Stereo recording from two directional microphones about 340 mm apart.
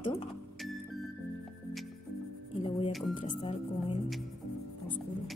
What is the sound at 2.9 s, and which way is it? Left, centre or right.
Speech, centre.